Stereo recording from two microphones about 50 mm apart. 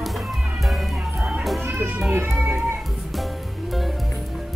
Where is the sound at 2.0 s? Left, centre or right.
Right.